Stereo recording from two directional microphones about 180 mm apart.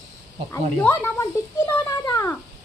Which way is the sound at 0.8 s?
10° left (ahead or behind).